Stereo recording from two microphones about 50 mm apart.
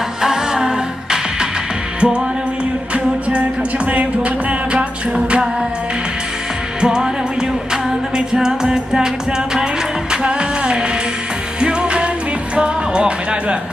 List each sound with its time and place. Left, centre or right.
0.2 s music: centre
6.8 s music: centre
10.1 s music: centre